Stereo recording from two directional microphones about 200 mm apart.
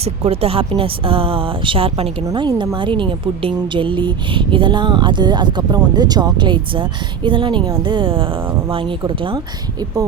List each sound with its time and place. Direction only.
0.0 s a woman's voice: 30° right (ahead or behind)